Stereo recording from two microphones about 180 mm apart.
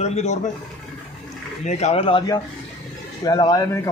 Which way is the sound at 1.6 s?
40° left (ahead or behind).